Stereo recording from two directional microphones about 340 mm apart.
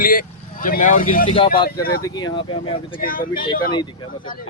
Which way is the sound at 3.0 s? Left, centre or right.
Left.